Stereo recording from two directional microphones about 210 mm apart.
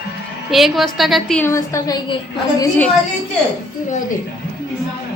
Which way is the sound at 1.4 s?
15° left (ahead or behind).